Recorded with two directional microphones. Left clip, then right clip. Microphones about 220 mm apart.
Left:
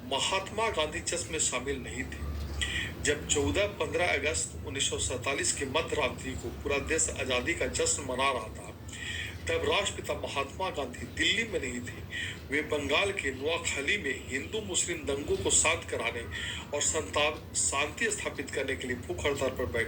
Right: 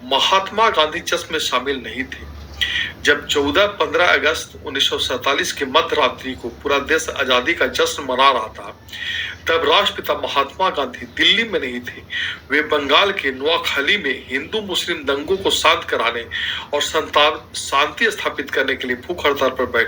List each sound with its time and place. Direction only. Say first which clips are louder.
0.1 s a man's voice: right 15 dB; 15° right (ahead or behind)